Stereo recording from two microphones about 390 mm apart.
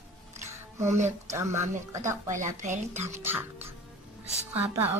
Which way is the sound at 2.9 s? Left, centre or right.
Centre.